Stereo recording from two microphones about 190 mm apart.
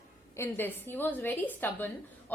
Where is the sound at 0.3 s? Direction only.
10° left (ahead or behind).